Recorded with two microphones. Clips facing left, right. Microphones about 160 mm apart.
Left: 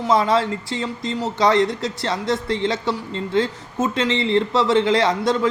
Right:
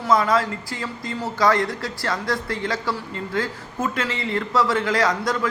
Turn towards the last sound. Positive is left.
turn(degrees=25)  # may be behind; listen again after turning